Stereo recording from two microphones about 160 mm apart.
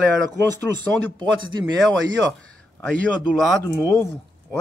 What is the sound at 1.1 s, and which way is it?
Speech, 30° right (ahead or behind).